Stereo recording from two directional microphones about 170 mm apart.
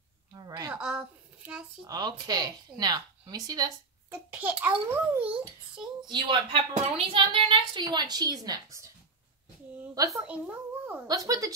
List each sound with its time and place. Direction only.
0.3 s a sound: 20° right (ahead or behind)
0.7 s a sound: 5° right (ahead or behind)
1.9 s a woman's voice: 25° right (ahead or behind)
4.1 s a child's voice: 10° right (ahead or behind)
6.0 s a woman's voice: 30° right (ahead or behind)
10.1 s a child's voice: 10° right (ahead or behind)
11.1 s a woman's voice: 20° right (ahead or behind)